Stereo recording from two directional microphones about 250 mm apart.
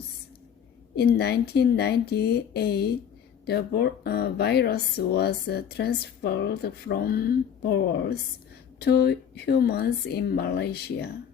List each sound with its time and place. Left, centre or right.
0.9 s speech: left